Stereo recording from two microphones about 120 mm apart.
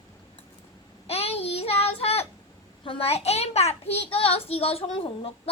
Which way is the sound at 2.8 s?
50° left (ahead or behind).